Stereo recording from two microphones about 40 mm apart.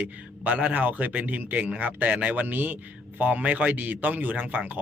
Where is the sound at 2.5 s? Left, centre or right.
Right.